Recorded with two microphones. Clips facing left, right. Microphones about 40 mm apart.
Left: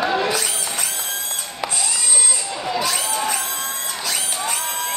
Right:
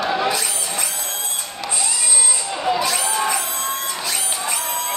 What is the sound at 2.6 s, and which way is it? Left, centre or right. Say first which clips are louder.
Crowd: right 3 dB; centre.